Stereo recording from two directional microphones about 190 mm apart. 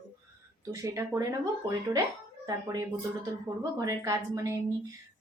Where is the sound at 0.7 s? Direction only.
15° right (ahead or behind).